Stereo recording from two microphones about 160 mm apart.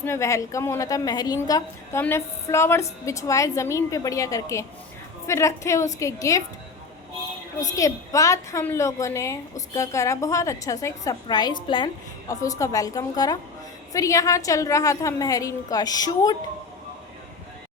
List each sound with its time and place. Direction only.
0.0 s a woman's voice: 15° left (ahead or behind)
7.6 s a woman's voice: 20° left (ahead or behind)